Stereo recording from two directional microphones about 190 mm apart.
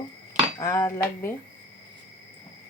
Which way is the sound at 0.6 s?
15° left (ahead or behind).